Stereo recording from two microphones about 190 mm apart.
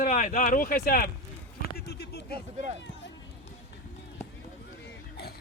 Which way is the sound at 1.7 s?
55° left (ahead or behind).